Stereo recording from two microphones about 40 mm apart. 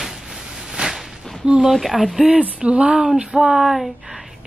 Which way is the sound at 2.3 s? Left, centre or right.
Right.